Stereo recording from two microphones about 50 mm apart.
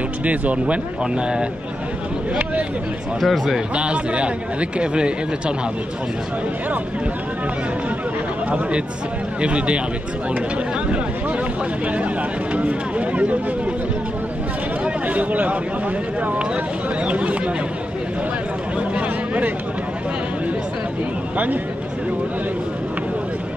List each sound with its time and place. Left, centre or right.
0.2 s a man's voice: right
3.2 s speech: centre
3.7 s a man's voice: right
9.4 s a man's voice: right
12.5 s a man's voice: right
15.0 s speech: right
17.0 s a man's voice: right
18.8 s a sound: right